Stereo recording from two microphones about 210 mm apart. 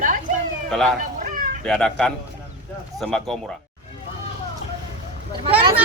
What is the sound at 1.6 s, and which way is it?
Speech, 5° left (ahead or behind).